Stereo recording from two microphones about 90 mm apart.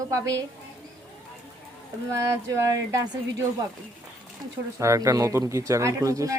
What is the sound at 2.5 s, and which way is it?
Speech, 30° right (ahead or behind).